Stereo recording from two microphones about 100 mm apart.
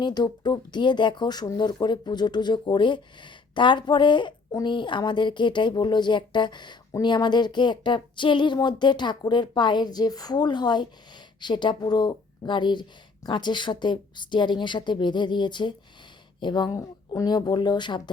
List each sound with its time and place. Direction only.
0.0 s speech: 45° left (ahead or behind)